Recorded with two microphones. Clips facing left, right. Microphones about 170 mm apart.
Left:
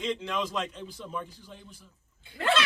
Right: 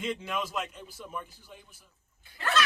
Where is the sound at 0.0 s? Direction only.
5° right (ahead or behind).